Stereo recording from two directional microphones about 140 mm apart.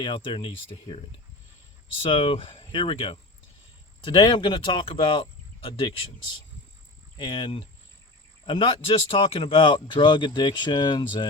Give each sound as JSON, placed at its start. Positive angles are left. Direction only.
{"t": 0.0, "sound": "speech", "side_deg": 35}
{"t": 2.0, "sound": "speech", "side_deg": 40}
{"t": 7.2, "sound": "speech", "side_deg": 35}